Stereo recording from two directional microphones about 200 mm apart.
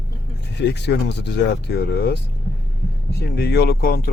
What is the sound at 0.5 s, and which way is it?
Speech, 60° left (ahead or behind).